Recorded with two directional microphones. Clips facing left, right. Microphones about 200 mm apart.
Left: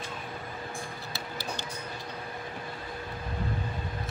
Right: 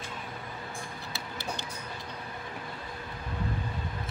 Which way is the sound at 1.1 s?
20° right (ahead or behind).